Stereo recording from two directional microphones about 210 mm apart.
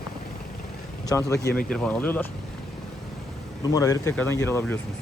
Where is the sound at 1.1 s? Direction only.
15° left (ahead or behind).